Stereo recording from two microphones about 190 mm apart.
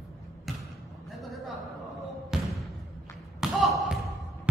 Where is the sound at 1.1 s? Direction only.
Centre (ahead or behind).